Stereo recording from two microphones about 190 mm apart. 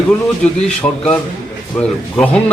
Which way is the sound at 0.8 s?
15° left (ahead or behind).